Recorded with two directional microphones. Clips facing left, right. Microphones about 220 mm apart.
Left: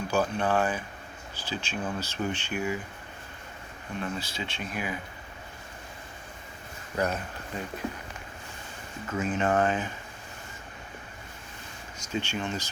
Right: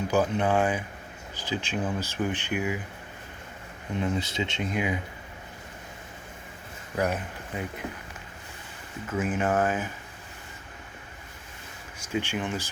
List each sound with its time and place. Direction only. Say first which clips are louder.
0.1 s speech: right 2 dB; 20° right (ahead or behind)
3.9 s speech: right 6 dB; 20° right (ahead or behind)
6.9 s speech: right 1 dB; 10° right (ahead or behind)
9.0 s speech: right 1 dB; 10° right (ahead or behind)
12.1 s speech: right 2 dB; 15° right (ahead or behind)